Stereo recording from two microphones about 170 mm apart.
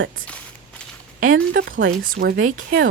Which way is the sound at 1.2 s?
55° right (ahead or behind).